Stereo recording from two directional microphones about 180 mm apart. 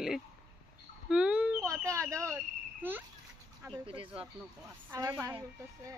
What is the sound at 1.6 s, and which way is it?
Speech, 15° right (ahead or behind).